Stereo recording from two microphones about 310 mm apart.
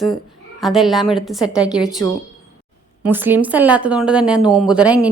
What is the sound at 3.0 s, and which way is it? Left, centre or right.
Speech, centre.